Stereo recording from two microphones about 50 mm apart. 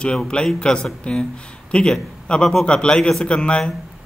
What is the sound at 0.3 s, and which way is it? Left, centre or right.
A man's voice, centre.